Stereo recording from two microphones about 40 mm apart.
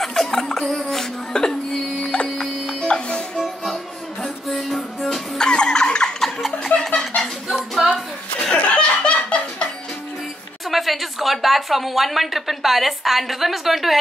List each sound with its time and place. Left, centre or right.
0.0 s a sound: centre
0.7 s music: centre
2.9 s music: left
3.3 s music: centre
5.4 s a sound: centre
6.4 s a sound: centre
7.8 s music: centre
8.7 s laughter: left
10.7 s speech: centre